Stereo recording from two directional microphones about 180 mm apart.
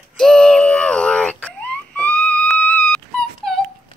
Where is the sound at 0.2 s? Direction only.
5° left (ahead or behind).